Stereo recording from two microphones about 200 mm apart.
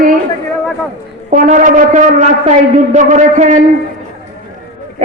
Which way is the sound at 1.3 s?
40° right (ahead or behind).